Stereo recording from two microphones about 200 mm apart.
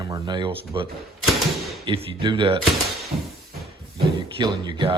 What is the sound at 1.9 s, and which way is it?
Speech, 25° right (ahead or behind).